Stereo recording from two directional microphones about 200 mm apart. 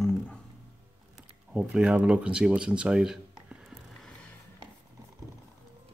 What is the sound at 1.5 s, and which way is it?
Speech, 5° right (ahead or behind).